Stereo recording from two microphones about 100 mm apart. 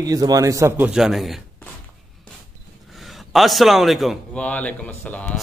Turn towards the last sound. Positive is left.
turn(degrees=15)  # may be behind; listen again after turning